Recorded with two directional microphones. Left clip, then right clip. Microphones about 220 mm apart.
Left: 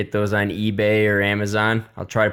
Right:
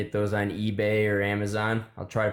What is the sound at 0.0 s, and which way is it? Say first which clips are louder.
Speech: left 6 dB; 35° left (ahead or behind).